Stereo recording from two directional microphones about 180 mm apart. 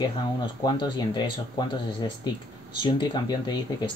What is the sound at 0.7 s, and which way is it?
Speech, 25° left (ahead or behind).